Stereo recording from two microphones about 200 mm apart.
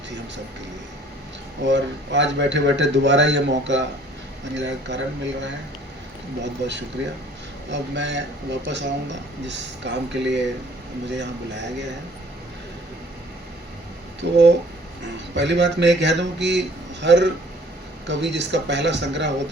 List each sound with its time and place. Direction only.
1.6 s speech: 60° right (ahead or behind)
14.2 s speech: 55° right (ahead or behind)